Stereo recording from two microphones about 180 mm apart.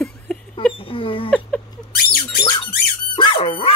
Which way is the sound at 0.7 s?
30° left (ahead or behind).